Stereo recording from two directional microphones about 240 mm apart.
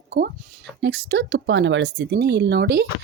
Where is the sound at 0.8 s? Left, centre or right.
Right.